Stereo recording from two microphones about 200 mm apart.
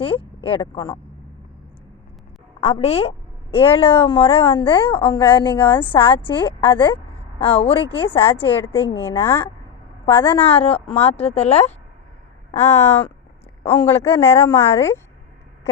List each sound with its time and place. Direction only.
0.0 s a woman's voice: 30° left (ahead or behind)
2.6 s a woman's voice: 30° left (ahead or behind)
8.5 s speech: 10° left (ahead or behind)
10.1 s a woman's voice: 25° left (ahead or behind)
12.7 s speech: 10° left (ahead or behind)